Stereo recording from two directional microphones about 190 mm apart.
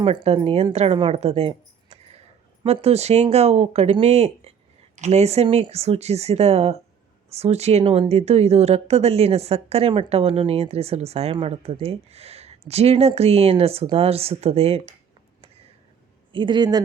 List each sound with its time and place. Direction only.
0.0 s a woman's voice: 30° right (ahead or behind)
16.3 s a man's voice: 25° right (ahead or behind)